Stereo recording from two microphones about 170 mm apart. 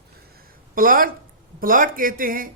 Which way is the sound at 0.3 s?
55° right (ahead or behind).